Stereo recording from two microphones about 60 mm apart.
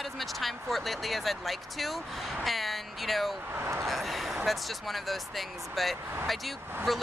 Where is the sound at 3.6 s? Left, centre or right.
Right.